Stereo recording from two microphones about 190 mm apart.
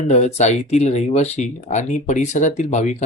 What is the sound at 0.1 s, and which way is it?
Speech, 35° left (ahead or behind).